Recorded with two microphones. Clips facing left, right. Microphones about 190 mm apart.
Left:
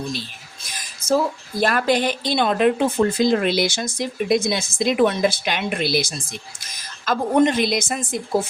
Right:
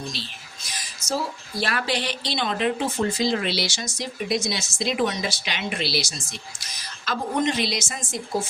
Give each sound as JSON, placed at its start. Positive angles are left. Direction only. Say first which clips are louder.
{"t": 0.7, "sound": "a woman's voice", "louder": "left 8 dB", "side_deg": 50}